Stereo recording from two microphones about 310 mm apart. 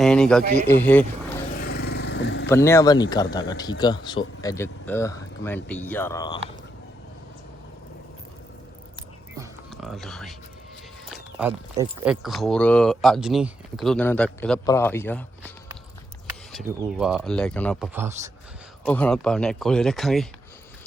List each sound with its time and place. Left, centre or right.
0.0 s speech: centre
1.5 s vehicle: left
2.5 s speech: centre
9.4 s music: centre
11.1 s speech: centre
18.9 s speech: centre